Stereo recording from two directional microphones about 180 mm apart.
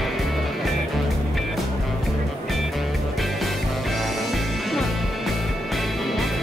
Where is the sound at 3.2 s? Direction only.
Centre (ahead or behind).